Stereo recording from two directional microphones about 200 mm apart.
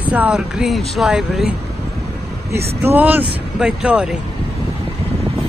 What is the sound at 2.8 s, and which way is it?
Speech, 10° right (ahead or behind).